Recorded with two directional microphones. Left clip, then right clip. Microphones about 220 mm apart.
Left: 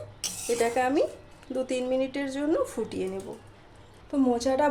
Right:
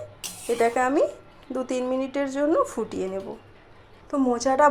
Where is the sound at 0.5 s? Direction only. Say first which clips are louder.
Right 3 dB; 5° right (ahead or behind).